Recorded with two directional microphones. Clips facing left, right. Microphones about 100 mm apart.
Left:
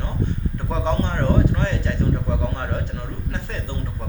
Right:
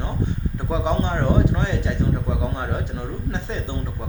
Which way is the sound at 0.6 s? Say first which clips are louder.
Right 1 dB; 15° right (ahead or behind).